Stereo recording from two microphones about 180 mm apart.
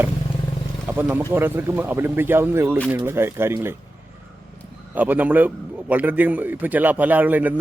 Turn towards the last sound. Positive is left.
turn(degrees=-10)  # may be behind; listen again after turning